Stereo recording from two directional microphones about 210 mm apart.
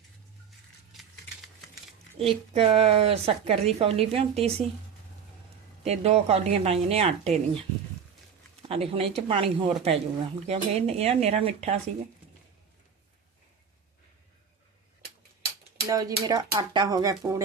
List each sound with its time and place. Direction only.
2.1 s a woman's voice: 30° right (ahead or behind)
5.8 s a woman's voice: 30° right (ahead or behind)
8.7 s a woman's voice: 25° right (ahead or behind)
15.9 s speech: 15° right (ahead or behind)